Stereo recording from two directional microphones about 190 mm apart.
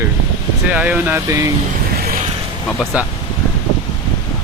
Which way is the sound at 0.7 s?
5° right (ahead or behind).